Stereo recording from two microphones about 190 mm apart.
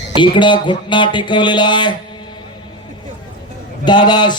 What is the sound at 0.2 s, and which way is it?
Speech, 25° left (ahead or behind).